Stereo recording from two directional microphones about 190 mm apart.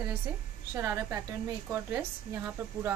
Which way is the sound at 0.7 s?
15° right (ahead or behind).